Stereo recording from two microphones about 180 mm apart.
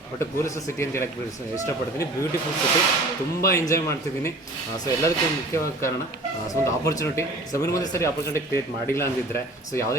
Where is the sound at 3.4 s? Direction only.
15° left (ahead or behind).